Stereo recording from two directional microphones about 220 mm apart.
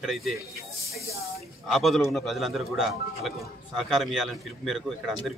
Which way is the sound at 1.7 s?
Centre (ahead or behind).